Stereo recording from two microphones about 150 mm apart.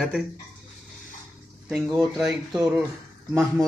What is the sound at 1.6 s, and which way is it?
Speech, centre (ahead or behind).